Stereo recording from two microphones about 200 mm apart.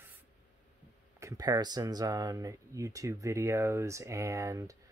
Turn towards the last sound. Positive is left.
turn(degrees=-15)  # may be behind; listen again after turning